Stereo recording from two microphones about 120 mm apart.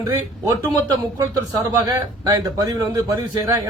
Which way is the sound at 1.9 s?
30° right (ahead or behind).